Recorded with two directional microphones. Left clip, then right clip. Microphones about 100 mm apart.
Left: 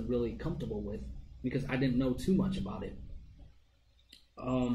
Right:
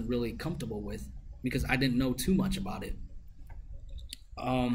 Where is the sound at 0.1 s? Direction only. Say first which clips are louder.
Even; 20° right (ahead or behind).